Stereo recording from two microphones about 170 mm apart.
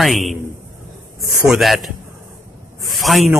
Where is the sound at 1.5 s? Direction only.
Centre (ahead or behind).